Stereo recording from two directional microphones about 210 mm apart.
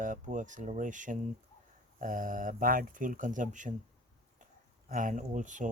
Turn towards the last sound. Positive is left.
turn(degrees=-35)  # may be behind; listen again after turning